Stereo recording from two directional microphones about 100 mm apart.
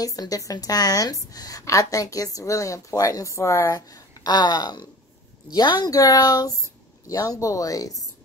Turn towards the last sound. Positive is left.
turn(degrees=35)  # may be behind; listen again after turning